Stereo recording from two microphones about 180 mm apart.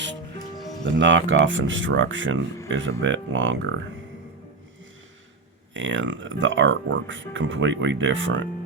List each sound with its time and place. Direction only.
0.5 s music: centre (ahead or behind)
0.9 s speech: 90° right
5.7 s speech: 90° right